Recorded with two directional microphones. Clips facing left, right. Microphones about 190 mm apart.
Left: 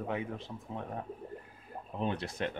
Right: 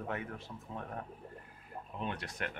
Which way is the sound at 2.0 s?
30° left (ahead or behind).